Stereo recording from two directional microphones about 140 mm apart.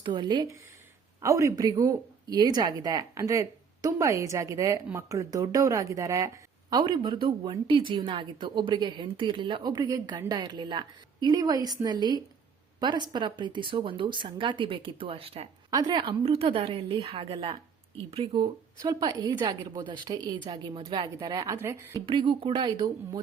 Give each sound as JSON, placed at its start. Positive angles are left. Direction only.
{"t": 0.0, "sound": "speech", "side_deg": -35}
{"t": 1.2, "sound": "speech", "side_deg": -20}
{"t": 15.7, "sound": "speech", "side_deg": -30}
{"t": 22.0, "sound": "speech", "side_deg": -35}